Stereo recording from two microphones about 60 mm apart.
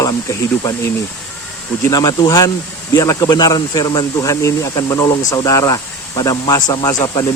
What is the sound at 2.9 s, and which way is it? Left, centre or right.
Speech, left.